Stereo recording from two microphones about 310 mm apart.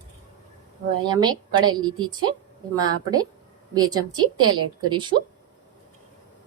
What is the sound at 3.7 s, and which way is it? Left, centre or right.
A woman's voice, centre.